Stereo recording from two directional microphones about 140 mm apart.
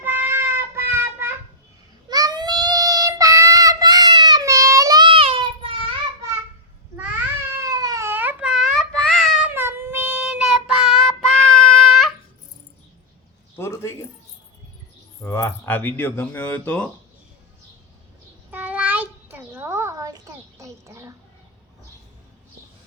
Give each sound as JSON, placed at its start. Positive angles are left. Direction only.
{"t": 0.0, "sound": "child singing", "side_deg": -15}
{"t": 2.0, "sound": "child singing", "side_deg": -30}
{"t": 5.0, "sound": "child singing", "side_deg": -40}
{"t": 7.7, "sound": "baby cry", "side_deg": -25}
{"t": 9.5, "sound": "child singing", "side_deg": -15}
{"t": 13.6, "sound": "zipper", "side_deg": 20}
{"t": 15.2, "sound": "speech", "side_deg": 20}
{"t": 18.5, "sound": "a sound", "side_deg": -10}